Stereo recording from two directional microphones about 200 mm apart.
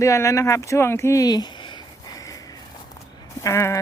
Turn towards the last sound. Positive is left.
turn(degrees=15)  # may be behind; listen again after turning